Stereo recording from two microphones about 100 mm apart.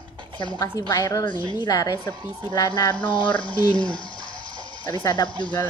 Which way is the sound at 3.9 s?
55° left (ahead or behind).